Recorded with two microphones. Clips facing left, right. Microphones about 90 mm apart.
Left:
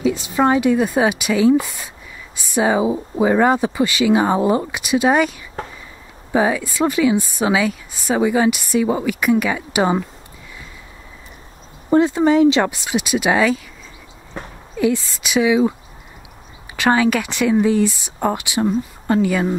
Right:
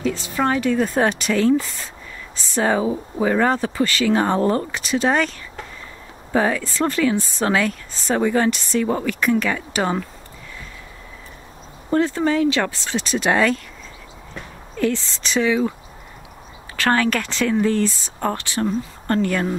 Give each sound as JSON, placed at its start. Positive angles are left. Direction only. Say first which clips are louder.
{"t": 0.0, "sound": "a woman's voice", "louder": "left 4 dB", "side_deg": 15}
{"t": 5.6, "sound": "whispering", "louder": "left 7 dB", "side_deg": 40}
{"t": 6.3, "sound": "a woman's voice", "louder": "left 2 dB", "side_deg": 10}
{"t": 11.9, "sound": "a woman's voice", "louder": "left 5 dB", "side_deg": 15}
{"t": 14.8, "sound": "a woman's voice", "louder": "left 3 dB", "side_deg": 10}
{"t": 16.7, "sound": "a woman's voice", "louder": "left 3 dB", "side_deg": 15}